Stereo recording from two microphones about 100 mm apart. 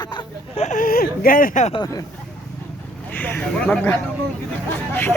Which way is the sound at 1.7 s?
40° left (ahead or behind).